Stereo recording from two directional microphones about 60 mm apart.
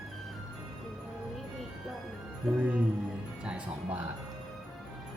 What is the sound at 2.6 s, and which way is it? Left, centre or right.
Speech, right.